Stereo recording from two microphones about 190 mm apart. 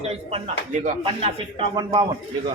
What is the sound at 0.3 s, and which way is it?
A man's voice, 35° right (ahead or behind).